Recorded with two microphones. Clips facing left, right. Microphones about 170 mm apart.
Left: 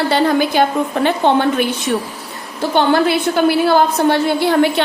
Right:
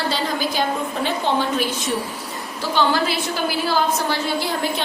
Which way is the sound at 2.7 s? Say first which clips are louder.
Left 6 dB; 60° left (ahead or behind).